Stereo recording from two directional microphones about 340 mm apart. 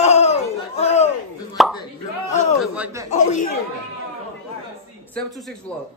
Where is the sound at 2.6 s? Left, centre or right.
Centre.